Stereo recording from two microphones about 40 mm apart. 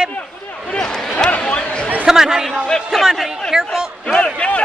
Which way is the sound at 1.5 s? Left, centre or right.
Left.